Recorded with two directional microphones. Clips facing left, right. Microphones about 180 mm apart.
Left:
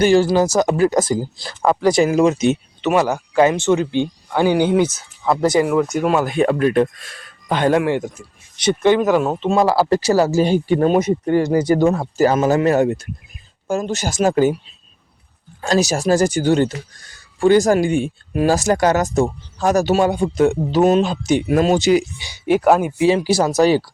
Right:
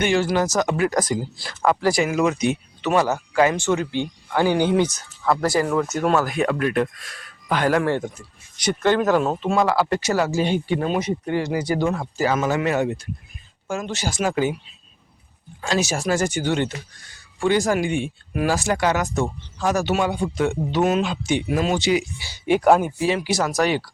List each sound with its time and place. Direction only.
0.0 s speech: 35° left (ahead or behind)
1.6 s speech: 20° left (ahead or behind)
2.0 s speech: 30° left (ahead or behind); by 6.2 s 15° left (ahead or behind)
6.2 s speech: 30° left (ahead or behind); by 9.4 s 10° left (ahead or behind)
9.4 s speech: 25° left (ahead or behind); by 14.5 s 45° left (ahead or behind)
15.6 s speech: 40° left (ahead or behind)
22.4 s speech: 5° left (ahead or behind)
23.0 s speech: 30° left (ahead or behind)